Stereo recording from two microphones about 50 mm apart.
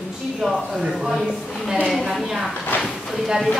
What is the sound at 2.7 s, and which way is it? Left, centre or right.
Speech, left.